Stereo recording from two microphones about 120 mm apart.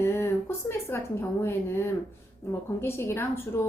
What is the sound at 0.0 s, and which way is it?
A woman's voice, 20° left (ahead or behind).